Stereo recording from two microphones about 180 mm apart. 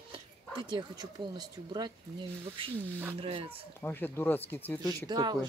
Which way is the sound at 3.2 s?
30° right (ahead or behind).